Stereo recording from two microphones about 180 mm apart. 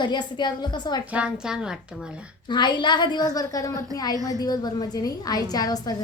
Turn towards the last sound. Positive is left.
turn(degrees=20)  # may be behind; listen again after turning